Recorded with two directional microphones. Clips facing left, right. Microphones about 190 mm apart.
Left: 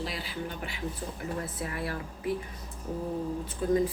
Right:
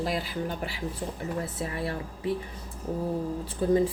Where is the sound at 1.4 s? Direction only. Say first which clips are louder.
Right 3 dB; 25° right (ahead or behind).